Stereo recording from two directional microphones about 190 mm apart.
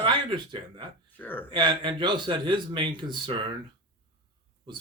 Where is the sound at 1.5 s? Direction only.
25° right (ahead or behind).